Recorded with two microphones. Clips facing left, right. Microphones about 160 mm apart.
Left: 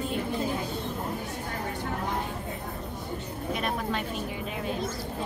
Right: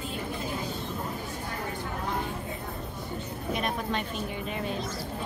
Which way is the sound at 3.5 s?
5° left (ahead or behind).